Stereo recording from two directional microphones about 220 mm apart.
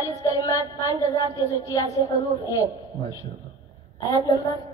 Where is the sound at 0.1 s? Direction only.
15° left (ahead or behind).